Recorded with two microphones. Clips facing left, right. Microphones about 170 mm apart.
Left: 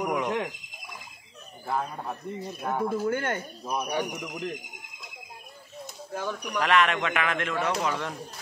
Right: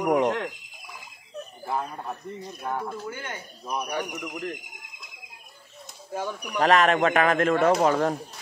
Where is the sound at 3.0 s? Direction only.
55° left (ahead or behind).